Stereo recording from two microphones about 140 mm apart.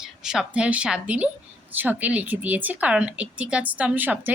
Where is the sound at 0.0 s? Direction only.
5° right (ahead or behind).